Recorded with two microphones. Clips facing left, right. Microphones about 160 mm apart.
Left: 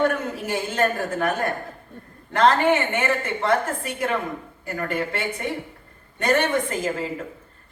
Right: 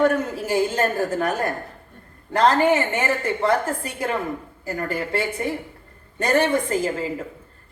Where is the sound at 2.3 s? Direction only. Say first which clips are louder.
Right 1 dB; 35° right (ahead or behind).